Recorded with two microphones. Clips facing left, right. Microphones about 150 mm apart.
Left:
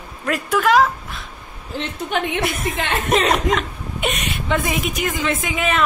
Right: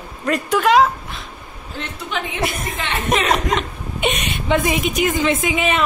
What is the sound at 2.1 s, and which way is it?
Speech, 55° left (ahead or behind).